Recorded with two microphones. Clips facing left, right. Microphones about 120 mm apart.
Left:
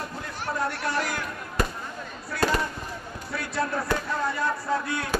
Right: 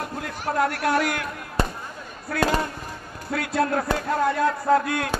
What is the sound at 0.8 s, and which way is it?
Speech, 65° right (ahead or behind).